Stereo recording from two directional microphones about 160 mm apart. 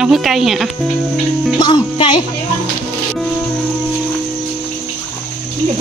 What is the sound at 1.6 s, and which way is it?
Speech, 30° left (ahead or behind).